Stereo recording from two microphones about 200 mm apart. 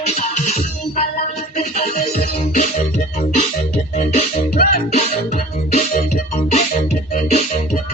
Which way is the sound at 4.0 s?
40° left (ahead or behind).